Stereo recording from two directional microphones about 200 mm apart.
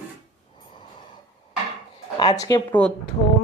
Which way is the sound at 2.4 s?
20° left (ahead or behind).